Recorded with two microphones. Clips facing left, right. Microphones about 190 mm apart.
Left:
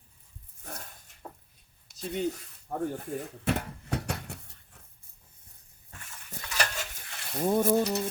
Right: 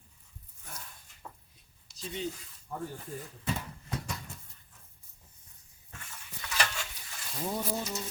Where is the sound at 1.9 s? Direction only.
55° left (ahead or behind).